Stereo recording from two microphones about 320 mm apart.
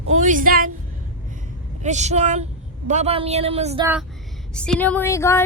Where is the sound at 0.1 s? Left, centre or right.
Right.